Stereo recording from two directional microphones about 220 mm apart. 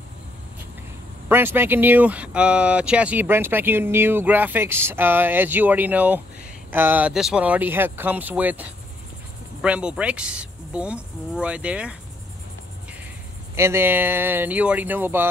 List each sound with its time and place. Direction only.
1.3 s speech: 10° right (ahead or behind)
13.6 s speech: 10° right (ahead or behind)